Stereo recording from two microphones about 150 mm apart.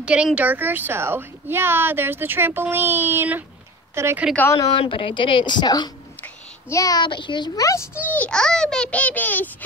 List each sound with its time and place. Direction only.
0.0 s a woman's voice: 5° right (ahead or behind)
4.6 s a woman's voice: 30° left (ahead or behind)
8.1 s a child's voice: 5° left (ahead or behind)